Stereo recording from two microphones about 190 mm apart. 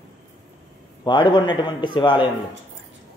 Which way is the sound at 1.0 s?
25° left (ahead or behind).